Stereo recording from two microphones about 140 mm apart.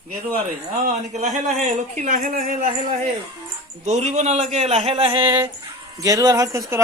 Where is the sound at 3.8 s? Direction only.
55° right (ahead or behind).